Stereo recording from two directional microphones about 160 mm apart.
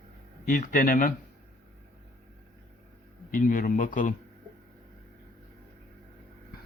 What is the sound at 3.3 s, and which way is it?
Speech, 60° left (ahead or behind).